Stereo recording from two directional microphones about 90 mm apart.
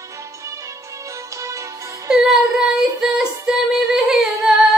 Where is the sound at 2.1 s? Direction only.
5° right (ahead or behind).